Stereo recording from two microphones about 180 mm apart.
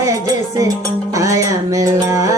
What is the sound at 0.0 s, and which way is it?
Music, 20° right (ahead or behind).